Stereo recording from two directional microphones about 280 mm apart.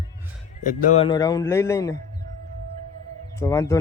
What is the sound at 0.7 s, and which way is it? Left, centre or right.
A man's voice, left.